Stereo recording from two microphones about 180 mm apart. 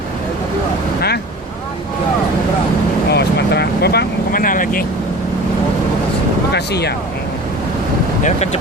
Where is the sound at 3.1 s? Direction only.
65° left (ahead or behind); by 4.8 s 50° left (ahead or behind).